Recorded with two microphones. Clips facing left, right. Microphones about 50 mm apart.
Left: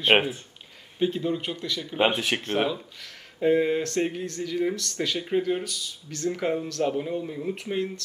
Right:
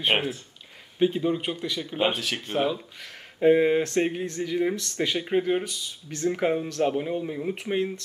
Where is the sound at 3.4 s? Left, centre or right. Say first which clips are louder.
Right 3 dB; centre.